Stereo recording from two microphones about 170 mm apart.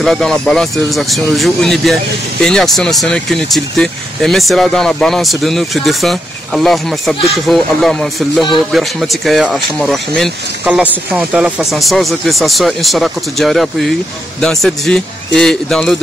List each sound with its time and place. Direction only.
0.0 s speech: 5° left (ahead or behind)